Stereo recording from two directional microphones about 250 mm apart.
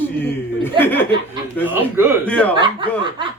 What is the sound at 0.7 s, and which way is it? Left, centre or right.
Speech, centre.